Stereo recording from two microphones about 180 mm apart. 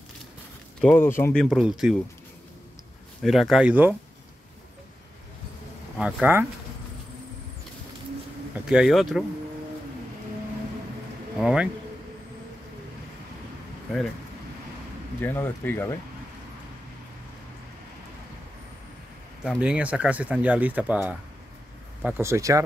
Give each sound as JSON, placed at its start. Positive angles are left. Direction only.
{"t": 0.7, "sound": "speech", "side_deg": 10}
{"t": 1.4, "sound": "speech", "side_deg": 0}
{"t": 3.2, "sound": "speech", "side_deg": 0}
{"t": 5.9, "sound": "speech", "side_deg": -5}
{"t": 8.5, "sound": "speech", "side_deg": -5}
{"t": 11.3, "sound": "speech", "side_deg": -5}
{"t": 15.2, "sound": "speech", "side_deg": 10}
{"t": 19.4, "sound": "speech", "side_deg": -5}